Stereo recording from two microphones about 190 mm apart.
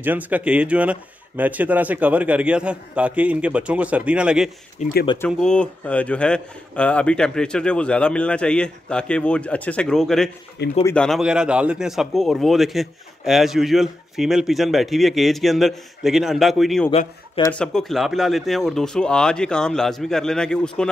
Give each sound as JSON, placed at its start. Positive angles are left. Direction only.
{"t": 0.0, "sound": "a man's voice", "side_deg": -10}
{"t": 4.8, "sound": "speech", "side_deg": 40}
{"t": 5.2, "sound": "a man's voice", "side_deg": 5}
{"t": 10.6, "sound": "speech", "side_deg": 60}
{"t": 11.0, "sound": "a man's voice", "side_deg": 0}